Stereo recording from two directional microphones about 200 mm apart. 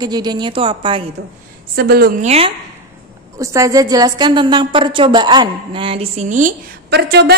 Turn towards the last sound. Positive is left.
turn(degrees=-55)  # may be behind; listen again after turning